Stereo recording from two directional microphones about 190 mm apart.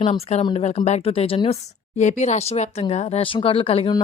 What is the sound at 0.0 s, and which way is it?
Speech, 30° left (ahead or behind).